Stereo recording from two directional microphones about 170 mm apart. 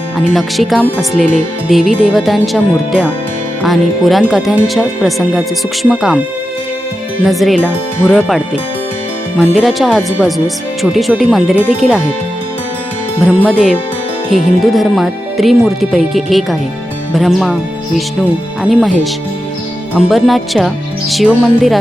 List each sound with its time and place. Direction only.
0.3 s speech: centre (ahead or behind)
7.3 s speech: centre (ahead or behind)
9.4 s speech: centre (ahead or behind)
13.1 s speech: 5° left (ahead or behind)
20.0 s speech: centre (ahead or behind)